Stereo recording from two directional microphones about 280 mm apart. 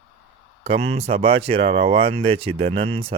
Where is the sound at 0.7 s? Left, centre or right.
Right.